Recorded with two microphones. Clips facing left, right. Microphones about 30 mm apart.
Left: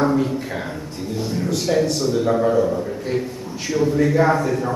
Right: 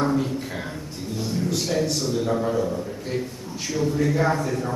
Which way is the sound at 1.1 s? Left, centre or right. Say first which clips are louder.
Left 3 dB; centre.